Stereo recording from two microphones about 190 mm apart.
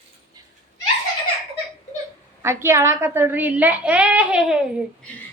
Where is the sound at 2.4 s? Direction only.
15° right (ahead or behind).